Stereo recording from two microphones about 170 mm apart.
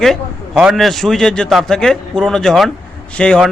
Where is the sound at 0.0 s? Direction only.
Centre (ahead or behind).